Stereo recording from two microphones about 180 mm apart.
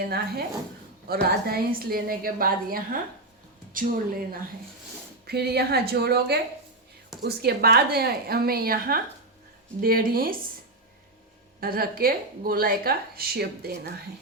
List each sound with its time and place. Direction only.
0.0 s a woman's voice: 60° right (ahead or behind)
5.2 s a woman's voice: 60° right (ahead or behind)
11.6 s a woman's voice: 55° right (ahead or behind)